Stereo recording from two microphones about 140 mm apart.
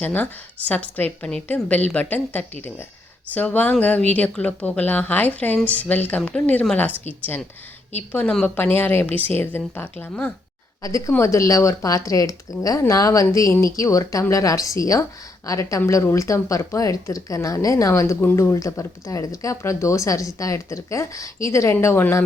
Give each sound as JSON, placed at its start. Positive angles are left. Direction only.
{"t": 0.0, "sound": "a woman's voice", "side_deg": 10}
{"t": 10.8, "sound": "speech", "side_deg": 25}